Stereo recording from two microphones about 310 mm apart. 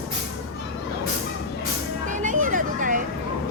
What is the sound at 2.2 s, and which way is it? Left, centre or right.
Vehicle, right.